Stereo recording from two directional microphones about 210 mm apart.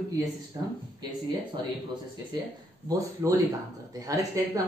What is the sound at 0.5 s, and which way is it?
Speech, 20° right (ahead or behind).